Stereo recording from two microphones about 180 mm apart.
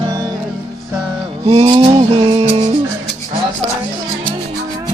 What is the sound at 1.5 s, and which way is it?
Music, 30° right (ahead or behind).